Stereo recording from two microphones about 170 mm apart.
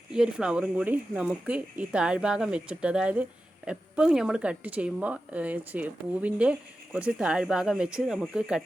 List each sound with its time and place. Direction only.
0.1 s speech: 5° right (ahead or behind)